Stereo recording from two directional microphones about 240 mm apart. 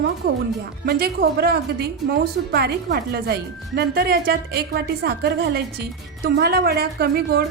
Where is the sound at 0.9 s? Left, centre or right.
Right.